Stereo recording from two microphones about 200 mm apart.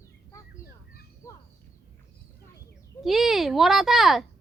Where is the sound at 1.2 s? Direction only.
15° left (ahead or behind).